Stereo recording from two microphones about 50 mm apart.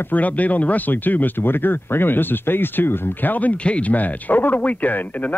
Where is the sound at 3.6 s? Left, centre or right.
Left.